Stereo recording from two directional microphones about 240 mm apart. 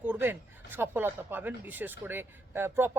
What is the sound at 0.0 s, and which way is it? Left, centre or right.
Speech, centre.